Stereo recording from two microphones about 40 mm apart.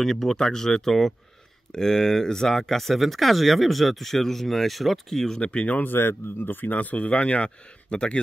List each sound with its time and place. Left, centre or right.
0.0 s speech: centre
5.4 s speech: left
5.8 s speech: left
7.1 s speech: left